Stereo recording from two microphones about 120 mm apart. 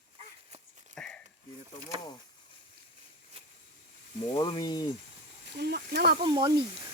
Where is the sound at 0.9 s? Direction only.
10° left (ahead or behind).